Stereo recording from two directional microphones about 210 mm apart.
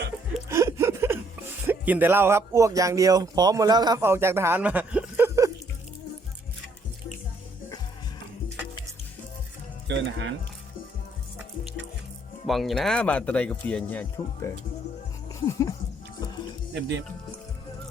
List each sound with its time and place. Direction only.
0.4 s a sound: 15° right (ahead or behind)
1.6 s speech: 10° right (ahead or behind)
9.8 s music: 55° right (ahead or behind)
12.5 s speech: centre (ahead or behind)